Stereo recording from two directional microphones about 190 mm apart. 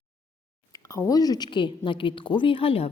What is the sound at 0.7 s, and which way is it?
A woman's voice, 15° left (ahead or behind).